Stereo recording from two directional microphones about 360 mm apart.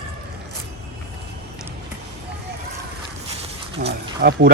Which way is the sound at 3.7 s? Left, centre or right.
Centre.